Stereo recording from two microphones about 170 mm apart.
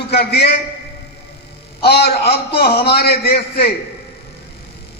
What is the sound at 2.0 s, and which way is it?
A man's voice, 65° left (ahead or behind).